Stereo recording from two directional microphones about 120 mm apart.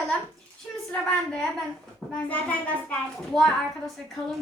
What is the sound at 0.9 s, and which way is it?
A woman's voice, 5° left (ahead or behind).